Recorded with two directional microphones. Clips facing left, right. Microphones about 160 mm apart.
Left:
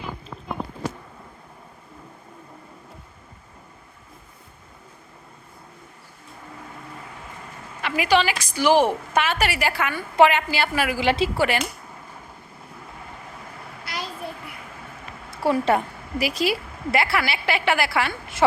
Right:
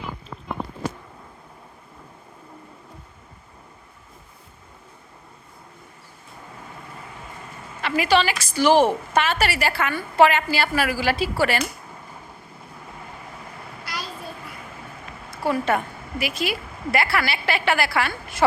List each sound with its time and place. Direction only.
7.8 s a woman's voice: 15° left (ahead or behind)
15.3 s a woman's voice: 30° left (ahead or behind)